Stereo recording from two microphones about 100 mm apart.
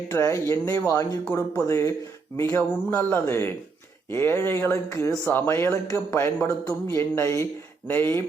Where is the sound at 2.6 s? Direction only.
20° left (ahead or behind).